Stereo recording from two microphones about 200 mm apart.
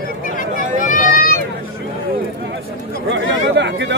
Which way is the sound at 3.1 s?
60° right (ahead or behind).